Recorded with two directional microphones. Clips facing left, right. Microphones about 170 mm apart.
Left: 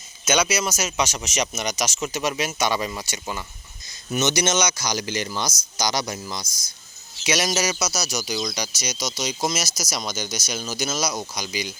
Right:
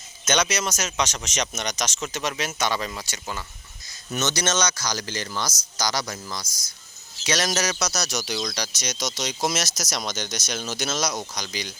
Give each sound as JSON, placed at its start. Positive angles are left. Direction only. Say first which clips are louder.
{"t": 0.3, "sound": "speech", "louder": "left 2 dB", "side_deg": 5}